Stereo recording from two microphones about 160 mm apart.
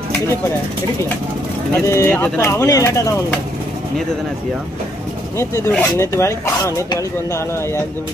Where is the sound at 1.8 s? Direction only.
15° left (ahead or behind).